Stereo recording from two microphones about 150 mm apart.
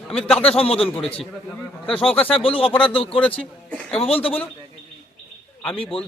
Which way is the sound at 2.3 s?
40° left (ahead or behind).